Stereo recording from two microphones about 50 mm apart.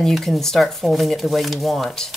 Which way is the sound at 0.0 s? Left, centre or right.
Centre.